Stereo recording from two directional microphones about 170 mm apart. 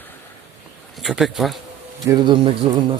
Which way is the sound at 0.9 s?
Centre (ahead or behind).